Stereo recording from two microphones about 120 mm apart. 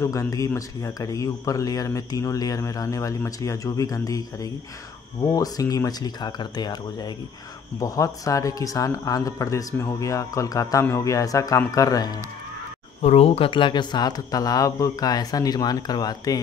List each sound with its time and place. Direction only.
0.0 s speech: 25° left (ahead or behind)
13.0 s speech: 60° left (ahead or behind); by 16.3 s 35° left (ahead or behind)